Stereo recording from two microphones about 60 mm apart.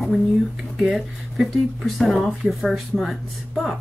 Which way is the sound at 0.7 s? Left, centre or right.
Centre.